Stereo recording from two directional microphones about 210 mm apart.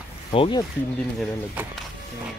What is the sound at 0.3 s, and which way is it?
Speech, 25° left (ahead or behind).